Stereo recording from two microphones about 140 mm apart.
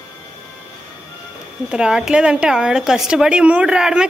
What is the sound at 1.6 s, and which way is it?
A woman's voice, 5° right (ahead or behind).